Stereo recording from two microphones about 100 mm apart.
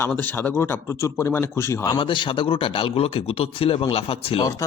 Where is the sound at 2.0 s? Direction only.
60° left (ahead or behind); by 4.4 s 85° left.